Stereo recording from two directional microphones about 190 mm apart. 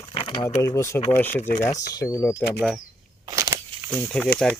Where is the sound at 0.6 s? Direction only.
15° left (ahead or behind).